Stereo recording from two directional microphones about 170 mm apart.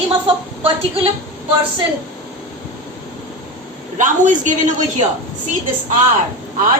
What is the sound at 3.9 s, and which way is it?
Speech, 50° right (ahead or behind).